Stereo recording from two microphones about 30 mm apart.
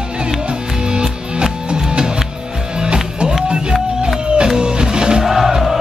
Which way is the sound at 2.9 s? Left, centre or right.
Right.